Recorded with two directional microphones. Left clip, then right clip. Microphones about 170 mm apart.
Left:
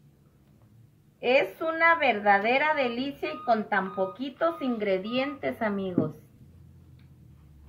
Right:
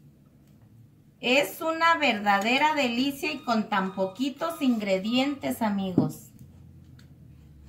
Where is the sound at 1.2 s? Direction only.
25° left (ahead or behind).